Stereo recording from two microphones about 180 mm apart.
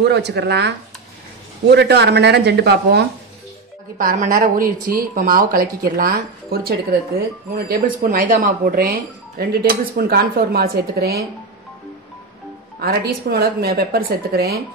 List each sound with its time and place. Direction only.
0.0 s speech: 70° right (ahead or behind)
4.0 s speech: 50° right (ahead or behind)
12.8 s speech: 60° right (ahead or behind)